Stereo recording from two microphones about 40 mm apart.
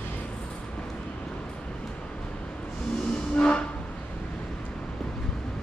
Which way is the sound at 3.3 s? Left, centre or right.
Left.